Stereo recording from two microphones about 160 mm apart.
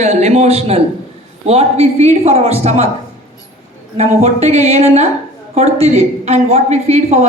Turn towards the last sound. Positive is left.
turn(degrees=-45)  # may be behind; listen again after turning